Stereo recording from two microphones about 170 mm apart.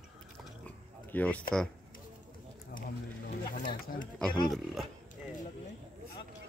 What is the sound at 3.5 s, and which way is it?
Speech, 50° left (ahead or behind).